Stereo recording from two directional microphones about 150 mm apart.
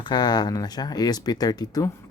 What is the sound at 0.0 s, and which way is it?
Speech, 30° left (ahead or behind).